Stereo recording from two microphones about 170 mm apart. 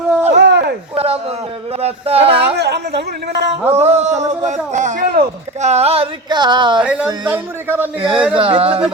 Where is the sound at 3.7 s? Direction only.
40° right (ahead or behind).